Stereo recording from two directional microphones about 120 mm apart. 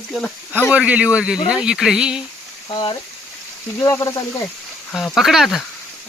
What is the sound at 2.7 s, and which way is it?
Speech, 40° left (ahead or behind).